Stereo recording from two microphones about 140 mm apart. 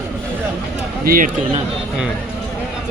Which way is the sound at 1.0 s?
90° right.